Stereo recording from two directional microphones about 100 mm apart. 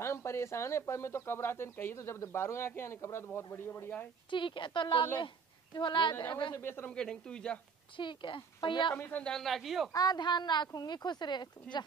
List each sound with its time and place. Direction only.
0.0 s speech: 25° left (ahead or behind)
4.3 s speech: 55° left (ahead or behind)
6.5 s speech: 20° left (ahead or behind)
6.9 s speech: 10° left (ahead or behind)
8.0 s speech: 55° left (ahead or behind)
8.9 s speech: 20° left (ahead or behind)
9.3 s speech: centre (ahead or behind)
9.9 s speech: 40° left (ahead or behind)